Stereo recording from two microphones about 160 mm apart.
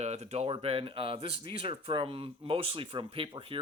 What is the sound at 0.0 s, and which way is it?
Speech, 45° right (ahead or behind).